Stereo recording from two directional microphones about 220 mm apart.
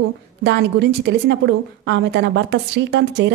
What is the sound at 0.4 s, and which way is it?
A woman's voice, 50° right (ahead or behind).